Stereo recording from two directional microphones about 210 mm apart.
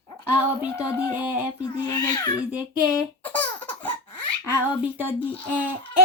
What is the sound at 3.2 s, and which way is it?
Baby laughter, 5° left (ahead or behind).